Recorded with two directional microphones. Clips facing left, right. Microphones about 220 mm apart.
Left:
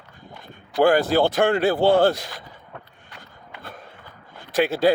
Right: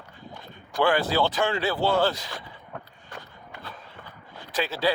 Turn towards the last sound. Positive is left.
turn(degrees=50)  # may be behind; listen again after turning